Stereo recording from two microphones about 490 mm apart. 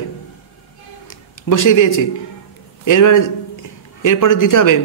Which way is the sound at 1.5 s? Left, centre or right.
Left.